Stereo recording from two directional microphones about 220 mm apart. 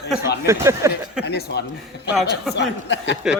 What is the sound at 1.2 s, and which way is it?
A man's voice, 50° left (ahead or behind).